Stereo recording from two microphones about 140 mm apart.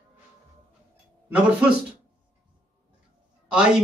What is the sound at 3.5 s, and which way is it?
Speech, 5° right (ahead or behind).